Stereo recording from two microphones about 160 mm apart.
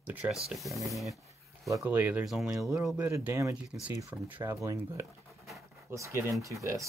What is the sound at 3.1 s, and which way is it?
Speech, 15° right (ahead or behind).